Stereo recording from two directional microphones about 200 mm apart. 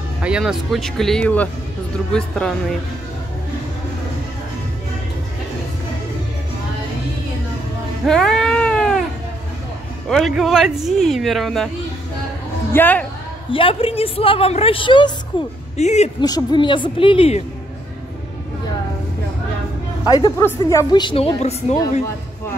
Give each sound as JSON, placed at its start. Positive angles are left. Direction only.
{"t": 0.2, "sound": "speech", "side_deg": -5}
{"t": 8.0, "sound": "cat", "side_deg": 0}
{"t": 10.0, "sound": "speech", "side_deg": 0}
{"t": 12.7, "sound": "speech", "side_deg": 10}
{"t": 13.5, "sound": "a woman's voice", "side_deg": 25}
{"t": 15.8, "sound": "speech", "side_deg": 35}
{"t": 16.2, "sound": "a woman's voice", "side_deg": 20}
{"t": 20.1, "sound": "a woman's voice", "side_deg": 20}